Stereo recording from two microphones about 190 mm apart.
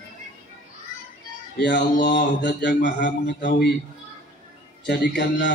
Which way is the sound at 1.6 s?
65° left (ahead or behind).